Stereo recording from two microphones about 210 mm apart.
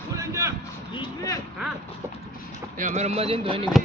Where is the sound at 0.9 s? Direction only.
15° left (ahead or behind).